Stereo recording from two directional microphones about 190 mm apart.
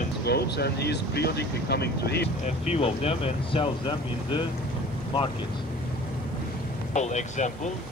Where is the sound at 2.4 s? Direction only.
35° left (ahead or behind).